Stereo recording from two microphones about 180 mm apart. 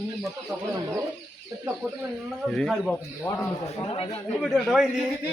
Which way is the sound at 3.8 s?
30° left (ahead or behind).